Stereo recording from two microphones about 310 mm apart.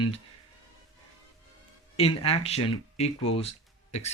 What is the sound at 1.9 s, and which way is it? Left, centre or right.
Speech, centre.